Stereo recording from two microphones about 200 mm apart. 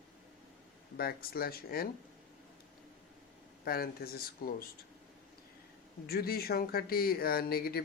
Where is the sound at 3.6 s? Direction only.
50° left (ahead or behind).